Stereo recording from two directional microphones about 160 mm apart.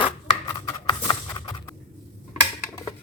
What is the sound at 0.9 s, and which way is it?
Clip-clop, 25° left (ahead or behind).